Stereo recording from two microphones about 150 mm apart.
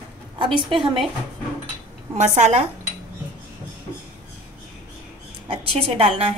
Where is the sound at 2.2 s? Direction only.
50° right (ahead or behind).